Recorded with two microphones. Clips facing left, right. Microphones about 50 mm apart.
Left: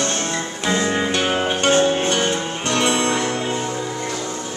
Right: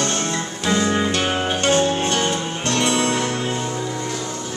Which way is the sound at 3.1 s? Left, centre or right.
Left.